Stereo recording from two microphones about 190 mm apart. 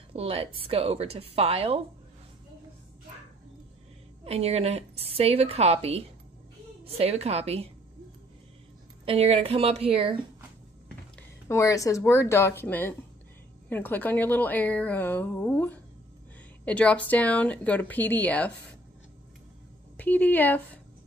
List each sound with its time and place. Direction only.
0.1 s a woman's voice: 30° right (ahead or behind)
4.2 s a woman's voice: 30° right (ahead or behind)
9.0 s a woman's voice: 30° right (ahead or behind)
11.4 s a woman's voice: 15° left (ahead or behind)
20.0 s a woman's voice: 10° left (ahead or behind)